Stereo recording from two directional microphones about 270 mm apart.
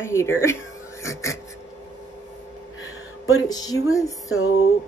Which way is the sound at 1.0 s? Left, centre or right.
Centre.